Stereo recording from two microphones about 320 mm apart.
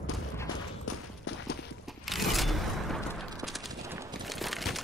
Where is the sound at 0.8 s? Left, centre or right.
Left.